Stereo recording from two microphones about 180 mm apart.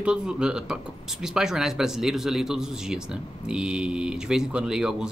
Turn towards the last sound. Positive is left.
turn(degrees=-5)  # may be behind; listen again after turning